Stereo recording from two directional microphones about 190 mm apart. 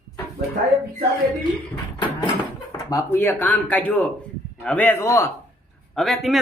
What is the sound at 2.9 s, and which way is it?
Speech, 10° left (ahead or behind).